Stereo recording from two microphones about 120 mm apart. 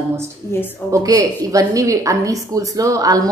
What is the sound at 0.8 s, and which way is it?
A woman's voice, 25° right (ahead or behind).